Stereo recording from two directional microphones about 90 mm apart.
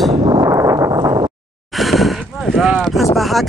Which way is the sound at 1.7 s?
Centre (ahead or behind).